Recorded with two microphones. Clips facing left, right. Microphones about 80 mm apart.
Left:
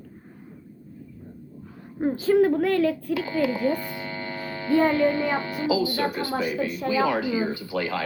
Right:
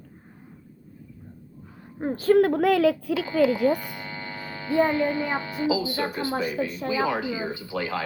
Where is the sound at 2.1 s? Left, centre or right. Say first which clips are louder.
Right 1 dB; right.